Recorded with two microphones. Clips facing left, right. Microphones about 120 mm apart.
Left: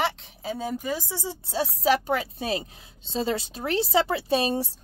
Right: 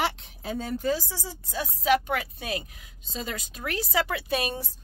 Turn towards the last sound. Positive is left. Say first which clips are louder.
# left 5 dB
turn(degrees=30)  # may be behind; listen again after turning